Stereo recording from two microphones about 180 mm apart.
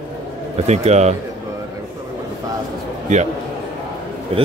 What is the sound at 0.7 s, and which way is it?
Speech, 40° right (ahead or behind).